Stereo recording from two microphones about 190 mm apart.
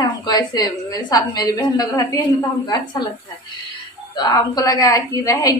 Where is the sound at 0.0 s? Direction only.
20° left (ahead or behind).